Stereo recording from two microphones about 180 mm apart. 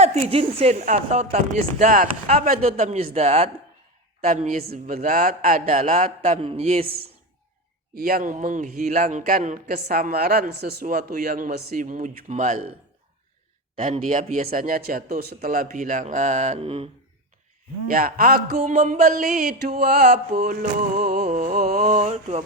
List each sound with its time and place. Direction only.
0.0 s a woman's voice: 35° right (ahead or behind)
1.8 s a man's voice: 50° right (ahead or behind)
2.0 s a woman's voice: 40° right (ahead or behind)
4.6 s speech: 60° right (ahead or behind)
4.9 s a man's voice: 50° right (ahead or behind); by 6.7 s 30° right (ahead or behind)
6.8 s a man's voice: 60° right (ahead or behind); by 12.7 s 40° right (ahead or behind)
13.8 s a man's voice: 45° right (ahead or behind)
17.8 s a man's voice: 55° right (ahead or behind)
21.2 s a woman's voice: 40° right (ahead or behind)